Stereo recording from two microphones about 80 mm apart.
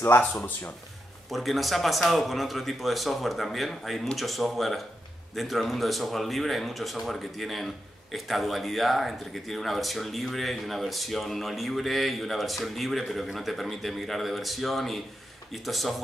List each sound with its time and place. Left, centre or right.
0.3 s speech: centre
1.3 s speech: centre